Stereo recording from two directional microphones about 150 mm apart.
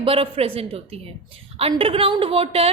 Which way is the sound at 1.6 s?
40° right (ahead or behind).